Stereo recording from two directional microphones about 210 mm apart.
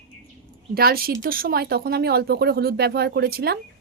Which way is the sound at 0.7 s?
45° right (ahead or behind).